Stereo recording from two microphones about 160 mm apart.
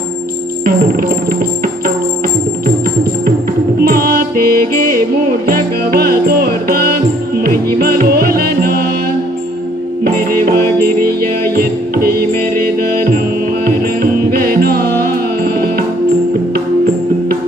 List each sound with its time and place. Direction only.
3.8 s music: 70° right (ahead or behind)
11.5 s music: 70° right (ahead or behind)
13.7 s music: 70° right (ahead or behind)